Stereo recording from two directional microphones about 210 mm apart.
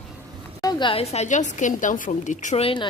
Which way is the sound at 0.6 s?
20° left (ahead or behind).